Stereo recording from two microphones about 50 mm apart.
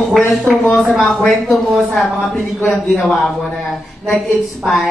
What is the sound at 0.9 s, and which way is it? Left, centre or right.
A woman's voice, centre.